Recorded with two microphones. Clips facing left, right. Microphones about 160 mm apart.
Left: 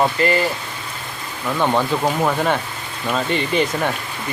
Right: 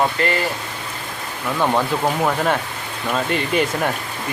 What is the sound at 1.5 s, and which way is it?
Speech, centre (ahead or behind).